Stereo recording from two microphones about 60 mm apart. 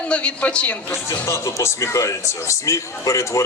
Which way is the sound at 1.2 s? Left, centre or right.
Left.